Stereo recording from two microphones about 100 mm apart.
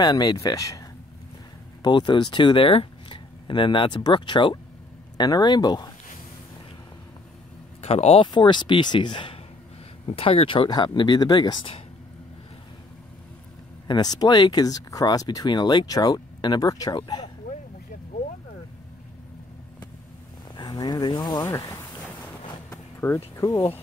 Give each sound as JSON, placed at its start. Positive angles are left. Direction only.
{"t": 0.0, "sound": "speech", "side_deg": 45}
{"t": 1.8, "sound": "speech", "side_deg": 50}
{"t": 7.8, "sound": "speech", "side_deg": 90}
{"t": 8.3, "sound": "speech", "side_deg": 50}
{"t": 10.0, "sound": "speech", "side_deg": 70}
{"t": 10.7, "sound": "speech", "side_deg": 45}
{"t": 13.8, "sound": "speech", "side_deg": 45}
{"t": 16.9, "sound": "speech", "side_deg": 50}
{"t": 20.5, "sound": "speech", "side_deg": 45}
{"t": 22.7, "sound": "a sound", "side_deg": 25}